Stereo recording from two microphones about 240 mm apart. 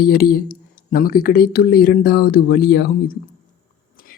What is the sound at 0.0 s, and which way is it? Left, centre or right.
Speech, left.